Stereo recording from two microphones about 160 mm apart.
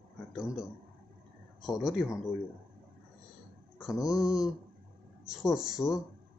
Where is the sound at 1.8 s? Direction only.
Centre (ahead or behind).